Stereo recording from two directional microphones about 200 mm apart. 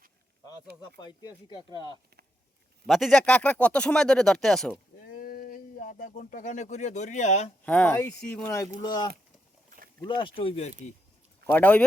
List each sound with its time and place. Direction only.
0.9 s speech: 20° left (ahead or behind)
2.8 s speech: centre (ahead or behind)
5.0 s speech: 45° left (ahead or behind)
7.6 s speech: 5° left (ahead or behind); by 10.7 s 30° left (ahead or behind)
11.4 s speech: 10° left (ahead or behind)